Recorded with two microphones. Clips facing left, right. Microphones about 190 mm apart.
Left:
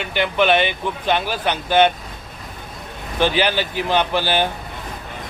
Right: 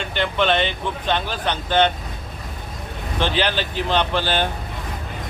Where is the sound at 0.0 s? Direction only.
10° left (ahead or behind).